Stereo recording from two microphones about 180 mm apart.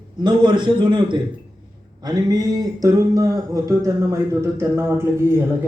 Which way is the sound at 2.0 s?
20° right (ahead or behind).